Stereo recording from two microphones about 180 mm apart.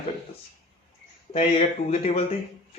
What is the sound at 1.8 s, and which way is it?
Speech, 35° left (ahead or behind).